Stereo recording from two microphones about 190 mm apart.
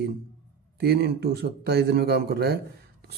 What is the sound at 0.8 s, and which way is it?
A man's voice, 55° right (ahead or behind).